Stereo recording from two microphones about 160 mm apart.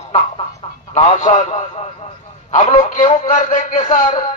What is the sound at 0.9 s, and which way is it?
A man's voice, 50° left (ahead or behind).